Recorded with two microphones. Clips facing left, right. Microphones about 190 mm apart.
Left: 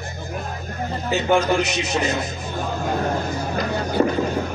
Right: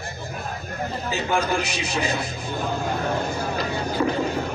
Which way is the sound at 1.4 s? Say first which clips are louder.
Left 4 dB; 30° right (ahead or behind).